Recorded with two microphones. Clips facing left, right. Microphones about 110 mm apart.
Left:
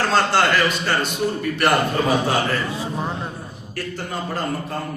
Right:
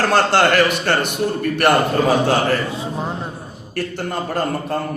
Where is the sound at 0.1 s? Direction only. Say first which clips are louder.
Right 3 dB; 60° right (ahead or behind).